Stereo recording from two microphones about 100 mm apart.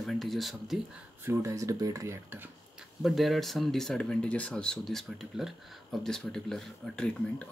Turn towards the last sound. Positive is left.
turn(degrees=10)  # may be behind; listen again after turning